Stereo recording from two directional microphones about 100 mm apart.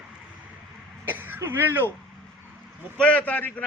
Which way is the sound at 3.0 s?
15° left (ahead or behind).